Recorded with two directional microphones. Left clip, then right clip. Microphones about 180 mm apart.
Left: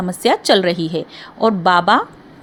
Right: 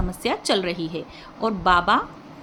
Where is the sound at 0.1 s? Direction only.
40° left (ahead or behind).